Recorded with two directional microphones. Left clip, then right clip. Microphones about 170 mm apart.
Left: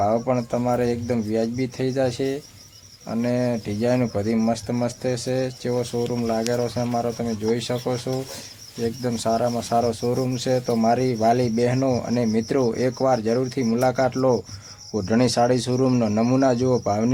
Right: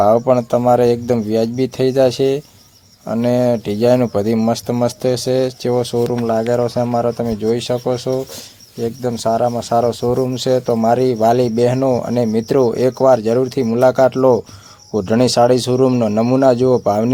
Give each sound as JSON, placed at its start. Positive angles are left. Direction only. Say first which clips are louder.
{"t": 0.0, "sound": "speech", "louder": "right 9 dB", "side_deg": -35}